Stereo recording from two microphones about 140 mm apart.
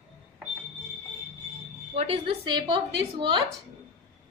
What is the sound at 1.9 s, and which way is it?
A woman's voice, 45° right (ahead or behind).